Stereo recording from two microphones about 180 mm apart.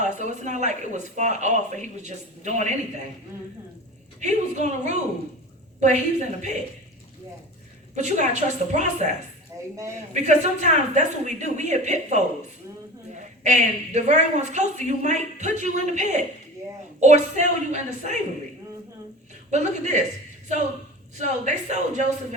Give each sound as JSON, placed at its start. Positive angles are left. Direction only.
{"t": 0.0, "sound": "speech", "side_deg": -40}
{"t": 4.2, "sound": "speech", "side_deg": -40}
{"t": 7.9, "sound": "speech", "side_deg": -40}
{"t": 10.2, "sound": "speech", "side_deg": -40}
{"t": 19.5, "sound": "speech", "side_deg": -40}
{"t": 21.2, "sound": "speech", "side_deg": -40}